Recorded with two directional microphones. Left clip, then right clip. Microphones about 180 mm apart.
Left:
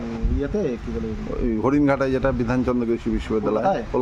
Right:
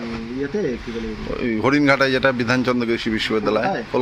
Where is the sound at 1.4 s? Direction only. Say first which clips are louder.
Right 2 dB; 10° left (ahead or behind).